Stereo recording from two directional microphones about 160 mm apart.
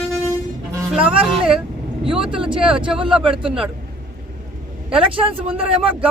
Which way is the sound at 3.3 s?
35° right (ahead or behind).